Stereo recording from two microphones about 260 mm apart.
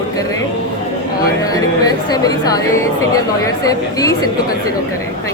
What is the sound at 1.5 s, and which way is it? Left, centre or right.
A man's voice, centre.